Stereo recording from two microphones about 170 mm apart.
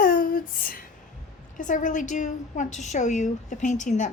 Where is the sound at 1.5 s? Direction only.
50° left (ahead or behind).